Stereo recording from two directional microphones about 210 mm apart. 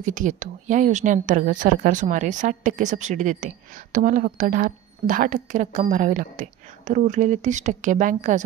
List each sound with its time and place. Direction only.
0.0 s a woman's voice: 35° right (ahead or behind)